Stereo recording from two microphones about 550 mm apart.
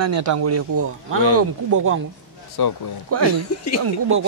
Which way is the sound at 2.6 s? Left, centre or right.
Left.